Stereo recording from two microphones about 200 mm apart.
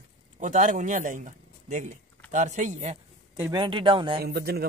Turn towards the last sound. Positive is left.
turn(degrees=-50)  # may be behind; listen again after turning